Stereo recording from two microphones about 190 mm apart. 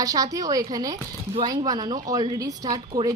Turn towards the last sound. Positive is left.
turn(degrees=-20)  # may be behind; listen again after turning